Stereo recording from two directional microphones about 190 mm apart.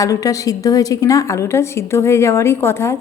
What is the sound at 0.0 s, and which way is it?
A woman's voice, 15° left (ahead or behind).